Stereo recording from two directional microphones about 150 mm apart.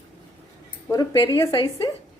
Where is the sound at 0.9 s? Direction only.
25° left (ahead or behind).